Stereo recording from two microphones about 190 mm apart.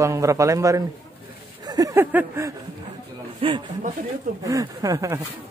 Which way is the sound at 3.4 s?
25° right (ahead or behind).